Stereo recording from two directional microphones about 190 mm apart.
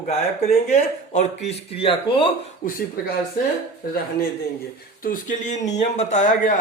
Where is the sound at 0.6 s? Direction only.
35° left (ahead or behind).